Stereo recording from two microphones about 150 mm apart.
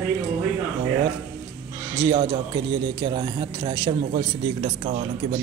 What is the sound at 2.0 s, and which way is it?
A man's voice, 30° right (ahead or behind).